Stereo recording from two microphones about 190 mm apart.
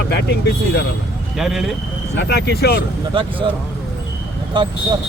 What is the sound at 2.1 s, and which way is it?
Speech, 60° left (ahead or behind).